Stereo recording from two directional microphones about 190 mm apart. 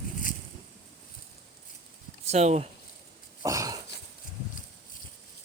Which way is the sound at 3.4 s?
20° right (ahead or behind).